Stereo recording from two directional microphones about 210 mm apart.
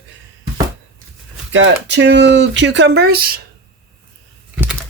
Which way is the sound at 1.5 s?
60° right (ahead or behind).